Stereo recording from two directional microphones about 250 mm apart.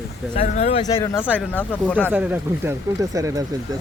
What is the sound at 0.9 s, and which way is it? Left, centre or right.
Speech, centre.